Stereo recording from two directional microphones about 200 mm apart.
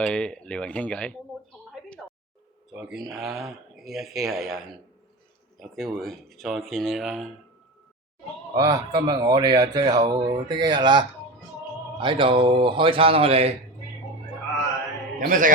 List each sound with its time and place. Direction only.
0.0 s speech: 5° left (ahead or behind)
2.7 s speech: centre (ahead or behind)
8.5 s speech: 15° right (ahead or behind)
15.2 s a man's voice: 40° right (ahead or behind)